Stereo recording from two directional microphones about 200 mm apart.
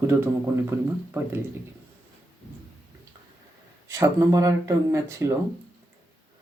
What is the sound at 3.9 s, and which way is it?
Speech, 15° right (ahead or behind).